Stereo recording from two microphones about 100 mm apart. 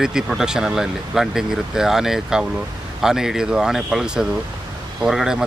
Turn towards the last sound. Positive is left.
turn(degrees=-5)  # may be behind; listen again after turning